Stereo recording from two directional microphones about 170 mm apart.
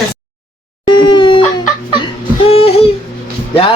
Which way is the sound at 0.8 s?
30° left (ahead or behind).